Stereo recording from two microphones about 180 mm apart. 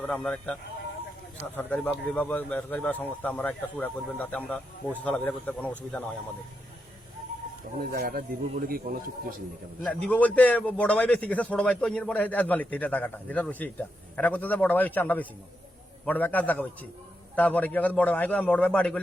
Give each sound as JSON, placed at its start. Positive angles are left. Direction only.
{"t": 0.0, "sound": "speech", "side_deg": 5}
{"t": 1.5, "sound": "a man's voice", "side_deg": 10}
{"t": 7.9, "sound": "a man's voice", "side_deg": -55}
{"t": 9.8, "sound": "a man's voice", "side_deg": 5}